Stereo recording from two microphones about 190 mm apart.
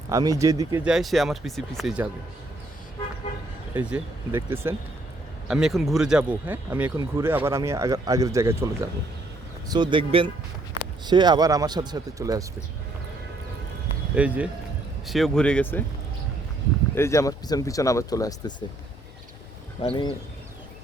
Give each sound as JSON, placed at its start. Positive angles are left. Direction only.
{"t": 0.1, "sound": "speech", "side_deg": -20}
{"t": 0.9, "sound": "speech", "side_deg": 0}
{"t": 3.8, "sound": "speech", "side_deg": -10}
{"t": 14.2, "sound": "speech", "side_deg": -5}
{"t": 16.9, "sound": "speech", "side_deg": 15}
{"t": 19.8, "sound": "speech", "side_deg": 25}